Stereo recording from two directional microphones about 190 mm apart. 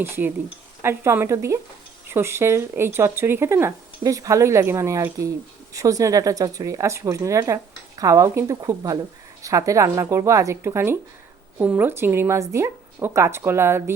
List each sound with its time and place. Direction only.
0.0 s speech: 10° right (ahead or behind)